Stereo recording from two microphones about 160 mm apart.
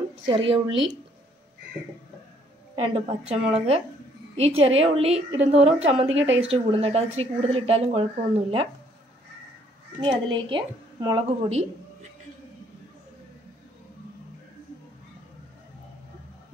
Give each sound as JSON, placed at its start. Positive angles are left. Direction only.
{"t": 0.3, "sound": "a woman's voice", "side_deg": -35}
{"t": 2.7, "sound": "a woman's voice", "side_deg": -40}
{"t": 9.9, "sound": "a woman's voice", "side_deg": -30}
{"t": 11.1, "sound": "a woman's voice", "side_deg": -40}